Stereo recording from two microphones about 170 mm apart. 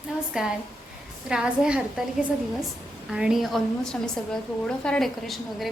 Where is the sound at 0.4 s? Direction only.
5° right (ahead or behind).